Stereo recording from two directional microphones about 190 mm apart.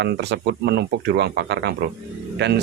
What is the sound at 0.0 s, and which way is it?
Speech, 65° right (ahead or behind).